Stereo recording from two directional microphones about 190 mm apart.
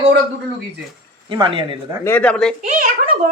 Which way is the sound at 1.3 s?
25° right (ahead or behind).